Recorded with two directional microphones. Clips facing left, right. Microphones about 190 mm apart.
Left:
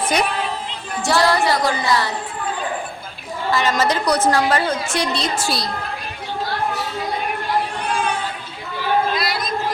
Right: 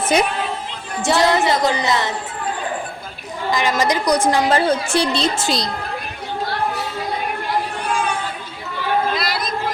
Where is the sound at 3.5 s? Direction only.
15° right (ahead or behind).